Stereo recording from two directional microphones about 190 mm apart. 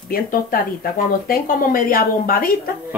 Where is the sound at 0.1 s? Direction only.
50° left (ahead or behind).